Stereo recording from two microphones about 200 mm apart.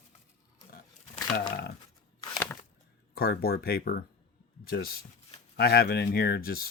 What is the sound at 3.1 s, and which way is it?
Speech, 50° left (ahead or behind).